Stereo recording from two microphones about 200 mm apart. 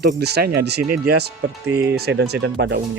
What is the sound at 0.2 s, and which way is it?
Speech, 55° right (ahead or behind).